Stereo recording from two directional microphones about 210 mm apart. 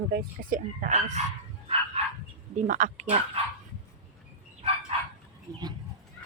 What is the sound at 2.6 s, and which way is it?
Speech, 35° right (ahead or behind).